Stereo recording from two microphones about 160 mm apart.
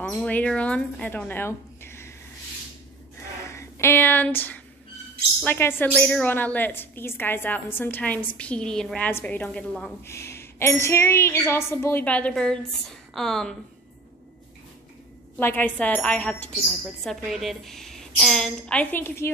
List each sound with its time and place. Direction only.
0.0 s a woman's voice: 5° left (ahead or behind)
3.4 s a woman's voice: 15° left (ahead or behind)
15.3 s a woman's voice: 10° left (ahead or behind)